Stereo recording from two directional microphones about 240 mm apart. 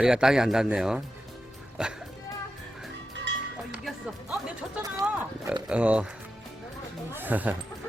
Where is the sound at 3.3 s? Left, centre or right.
Right.